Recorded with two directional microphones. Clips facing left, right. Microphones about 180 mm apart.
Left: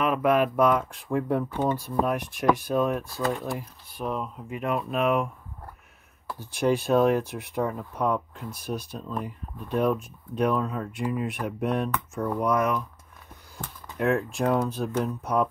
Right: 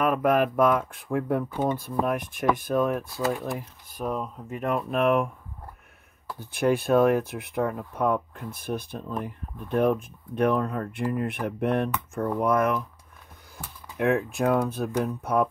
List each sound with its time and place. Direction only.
0.0 s speech: 45° right (ahead or behind)
3.2 s speech: centre (ahead or behind)
4.0 s speech: 45° right (ahead or behind)
6.4 s speech: 55° right (ahead or behind)
13.9 s speech: 55° right (ahead or behind)